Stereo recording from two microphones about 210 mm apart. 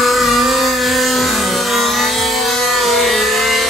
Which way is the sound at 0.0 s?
Centre (ahead or behind).